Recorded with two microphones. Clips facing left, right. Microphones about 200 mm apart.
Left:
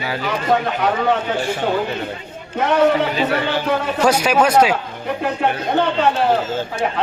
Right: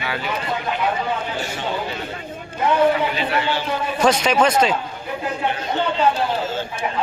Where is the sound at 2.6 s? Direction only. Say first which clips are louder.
Left 2 dB; 80° left.